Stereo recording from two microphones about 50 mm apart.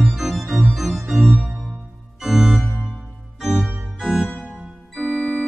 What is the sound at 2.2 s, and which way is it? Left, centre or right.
Organ, centre.